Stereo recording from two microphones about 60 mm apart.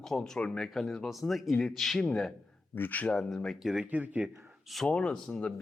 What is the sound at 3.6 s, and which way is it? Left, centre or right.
Speech, centre.